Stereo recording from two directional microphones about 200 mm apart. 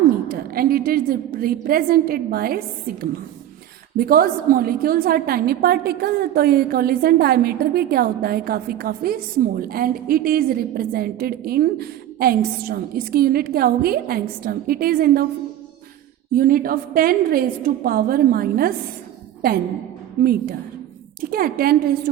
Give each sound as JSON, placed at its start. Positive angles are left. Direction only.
{"t": 0.3, "sound": "a woman's voice", "side_deg": -45}
{"t": 3.9, "sound": "a woman's voice", "side_deg": -45}
{"t": 16.3, "sound": "a woman's voice", "side_deg": -45}
{"t": 20.2, "sound": "a woman's voice", "side_deg": -45}